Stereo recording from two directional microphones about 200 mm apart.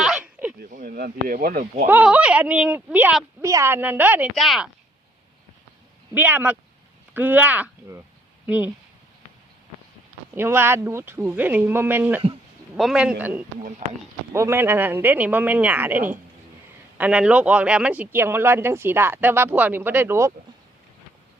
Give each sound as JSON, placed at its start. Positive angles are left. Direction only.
{"t": 0.0, "sound": "a sound", "side_deg": -5}
{"t": 0.6, "sound": "speech", "side_deg": -40}
{"t": 1.9, "sound": "speech", "side_deg": -5}
{"t": 6.1, "sound": "speech", "side_deg": -10}
{"t": 10.3, "sound": "a man's voice", "side_deg": -10}
{"t": 13.6, "sound": "speech", "side_deg": -40}
{"t": 14.3, "sound": "speech", "side_deg": -10}